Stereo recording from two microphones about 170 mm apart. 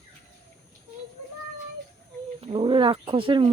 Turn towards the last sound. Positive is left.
turn(degrees=-30)  # may be behind; listen again after turning